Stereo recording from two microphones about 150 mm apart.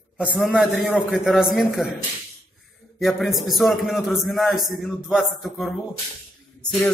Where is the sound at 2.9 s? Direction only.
Centre (ahead or behind).